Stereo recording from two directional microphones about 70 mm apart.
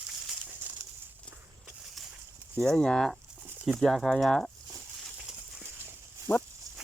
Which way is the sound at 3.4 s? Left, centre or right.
Centre.